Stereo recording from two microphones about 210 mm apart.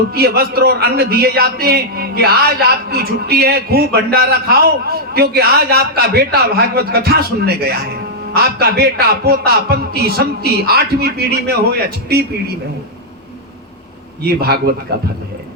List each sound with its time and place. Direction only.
0.1 s a man's voice: 50° right (ahead or behind)
14.3 s a man's voice: 50° right (ahead or behind)